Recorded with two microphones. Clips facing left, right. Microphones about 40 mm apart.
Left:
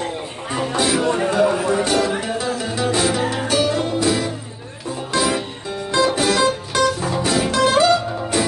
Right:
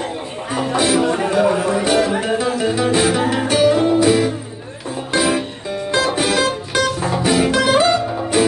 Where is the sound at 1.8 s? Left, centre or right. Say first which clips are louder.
Right 3 dB; right.